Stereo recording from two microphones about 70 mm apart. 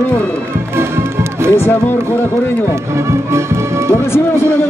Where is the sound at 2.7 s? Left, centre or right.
Right.